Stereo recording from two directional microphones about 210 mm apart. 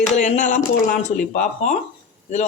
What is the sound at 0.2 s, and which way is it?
Speech, 35° left (ahead or behind).